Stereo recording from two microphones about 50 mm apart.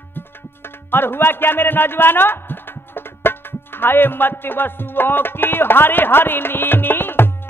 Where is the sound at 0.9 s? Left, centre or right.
Left.